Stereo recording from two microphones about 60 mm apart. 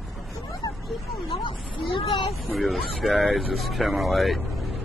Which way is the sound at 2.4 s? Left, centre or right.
Centre.